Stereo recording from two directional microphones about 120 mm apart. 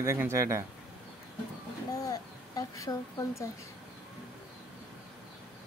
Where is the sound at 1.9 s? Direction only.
30° left (ahead or behind).